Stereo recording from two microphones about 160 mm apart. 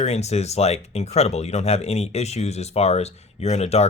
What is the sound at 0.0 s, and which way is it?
Speech, 45° left (ahead or behind).